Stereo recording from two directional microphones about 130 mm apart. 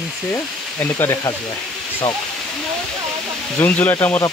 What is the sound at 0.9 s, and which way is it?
Speech, 20° left (ahead or behind).